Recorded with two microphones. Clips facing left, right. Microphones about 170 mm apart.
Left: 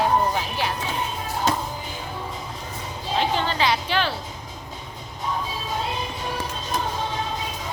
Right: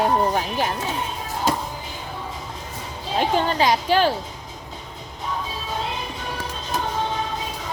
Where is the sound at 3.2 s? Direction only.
45° right (ahead or behind).